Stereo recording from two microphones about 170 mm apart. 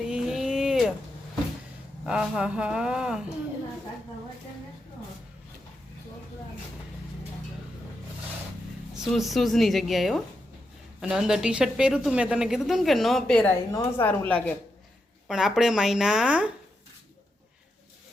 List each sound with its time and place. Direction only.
0.0 s a sound: 5° right (ahead or behind)
2.0 s a woman's voice: 5° right (ahead or behind)
9.0 s a woman's voice: centre (ahead or behind)
13.7 s speech: 20° left (ahead or behind)
14.1 s a woman's voice: 10° left (ahead or behind)
15.3 s a woman's voice: centre (ahead or behind)